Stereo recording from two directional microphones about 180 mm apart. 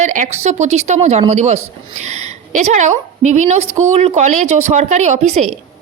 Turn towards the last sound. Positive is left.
turn(degrees=-40)  # may be behind; listen again after turning